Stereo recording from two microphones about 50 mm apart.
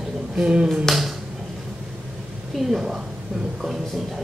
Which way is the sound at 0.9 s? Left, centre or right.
Centre.